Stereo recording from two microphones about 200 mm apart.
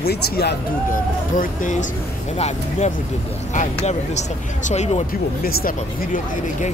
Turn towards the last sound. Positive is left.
turn(degrees=40)  # may be behind; listen again after turning